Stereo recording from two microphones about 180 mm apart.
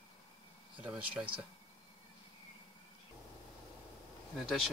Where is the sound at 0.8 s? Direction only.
5° right (ahead or behind).